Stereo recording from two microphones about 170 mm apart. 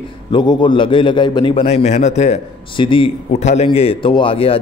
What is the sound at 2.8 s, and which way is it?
A man's voice, 30° left (ahead or behind).